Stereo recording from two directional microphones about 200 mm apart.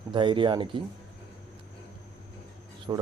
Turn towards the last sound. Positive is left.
turn(degrees=-20)  # may be behind; listen again after turning